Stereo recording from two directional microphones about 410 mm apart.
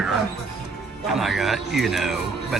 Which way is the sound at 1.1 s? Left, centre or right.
Centre.